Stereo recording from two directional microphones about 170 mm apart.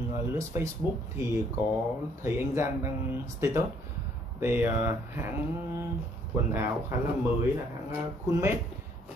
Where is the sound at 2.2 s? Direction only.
15° right (ahead or behind).